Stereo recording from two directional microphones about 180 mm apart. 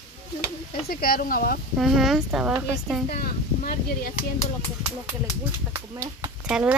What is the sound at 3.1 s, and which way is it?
Speech, 55° left (ahead or behind).